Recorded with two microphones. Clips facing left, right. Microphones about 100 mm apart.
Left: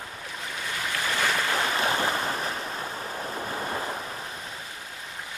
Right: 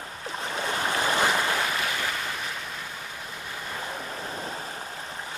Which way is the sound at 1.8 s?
35° left (ahead or behind).